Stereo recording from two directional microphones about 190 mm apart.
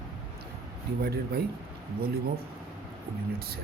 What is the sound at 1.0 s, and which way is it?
Speech, 55° right (ahead or behind).